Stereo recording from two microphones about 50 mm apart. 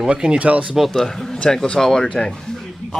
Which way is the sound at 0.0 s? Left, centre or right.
Centre.